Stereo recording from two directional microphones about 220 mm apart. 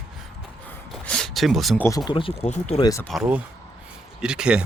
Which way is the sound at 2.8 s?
15° left (ahead or behind).